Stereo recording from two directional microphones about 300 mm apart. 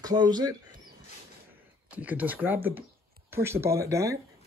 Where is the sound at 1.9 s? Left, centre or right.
Centre.